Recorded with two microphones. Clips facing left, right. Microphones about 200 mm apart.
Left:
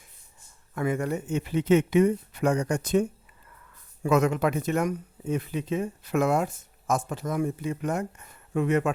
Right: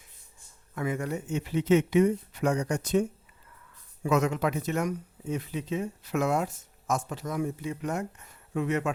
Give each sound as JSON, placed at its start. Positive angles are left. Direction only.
{"t": 0.8, "sound": "speech", "side_deg": 55}